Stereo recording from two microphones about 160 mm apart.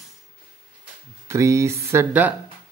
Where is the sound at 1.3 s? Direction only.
20° right (ahead or behind).